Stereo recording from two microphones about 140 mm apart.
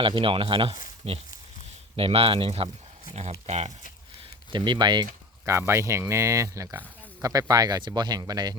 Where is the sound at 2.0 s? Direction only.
40° right (ahead or behind).